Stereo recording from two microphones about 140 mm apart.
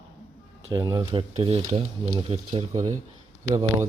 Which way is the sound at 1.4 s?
45° right (ahead or behind).